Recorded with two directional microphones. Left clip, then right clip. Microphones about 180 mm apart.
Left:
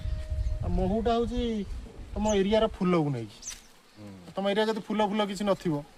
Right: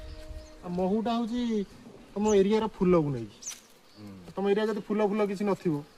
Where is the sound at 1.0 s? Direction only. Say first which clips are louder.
Left 4 dB; 15° left (ahead or behind).